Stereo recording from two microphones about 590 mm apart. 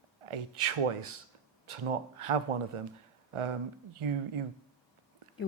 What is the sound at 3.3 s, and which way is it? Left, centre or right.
Speech, right.